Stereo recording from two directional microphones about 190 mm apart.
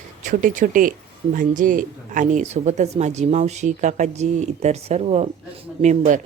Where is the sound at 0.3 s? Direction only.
45° right (ahead or behind).